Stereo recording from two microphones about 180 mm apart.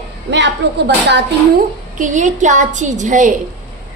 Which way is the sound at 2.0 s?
45° right (ahead or behind).